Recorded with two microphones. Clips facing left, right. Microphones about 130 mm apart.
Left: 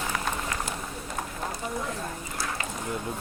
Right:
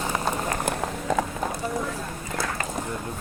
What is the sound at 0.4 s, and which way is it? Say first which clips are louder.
Run: right 6 dB; 45° right (ahead or behind).